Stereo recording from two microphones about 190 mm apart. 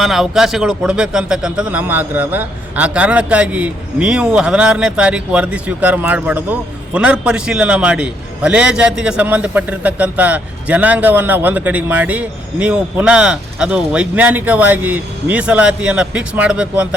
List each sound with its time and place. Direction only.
0.0 s a man's voice: centre (ahead or behind)